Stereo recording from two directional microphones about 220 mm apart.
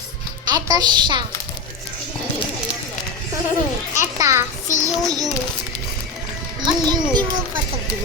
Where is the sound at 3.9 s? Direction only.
15° right (ahead or behind).